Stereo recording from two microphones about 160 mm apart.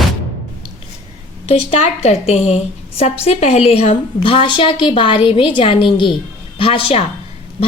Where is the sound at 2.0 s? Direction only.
40° left (ahead or behind).